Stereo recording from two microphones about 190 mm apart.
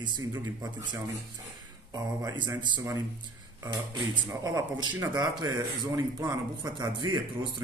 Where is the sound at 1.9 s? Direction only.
20° right (ahead or behind).